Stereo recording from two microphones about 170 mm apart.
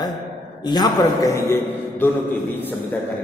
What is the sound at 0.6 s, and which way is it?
A man's voice, 25° left (ahead or behind).